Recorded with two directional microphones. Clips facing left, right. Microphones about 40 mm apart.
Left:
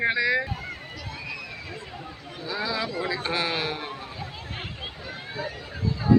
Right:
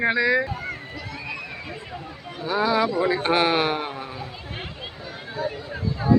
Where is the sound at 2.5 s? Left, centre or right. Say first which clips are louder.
Right 8 dB; right.